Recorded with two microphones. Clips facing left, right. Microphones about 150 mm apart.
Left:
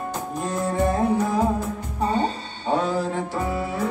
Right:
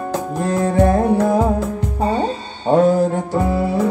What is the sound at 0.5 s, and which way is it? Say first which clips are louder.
Music: right 8 dB; 70° right (ahead or behind).